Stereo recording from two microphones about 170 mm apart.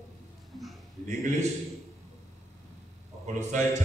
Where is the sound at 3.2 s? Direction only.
45° right (ahead or behind).